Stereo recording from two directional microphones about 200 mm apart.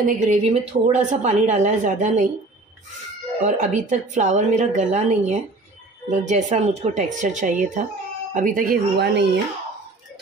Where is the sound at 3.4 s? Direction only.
40° right (ahead or behind).